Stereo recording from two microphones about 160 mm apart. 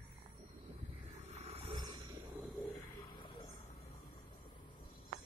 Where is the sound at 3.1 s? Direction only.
25° left (ahead or behind).